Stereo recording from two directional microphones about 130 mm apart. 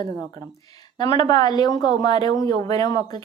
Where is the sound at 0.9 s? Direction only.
35° left (ahead or behind).